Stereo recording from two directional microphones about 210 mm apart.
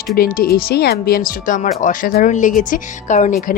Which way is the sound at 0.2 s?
45° left (ahead or behind).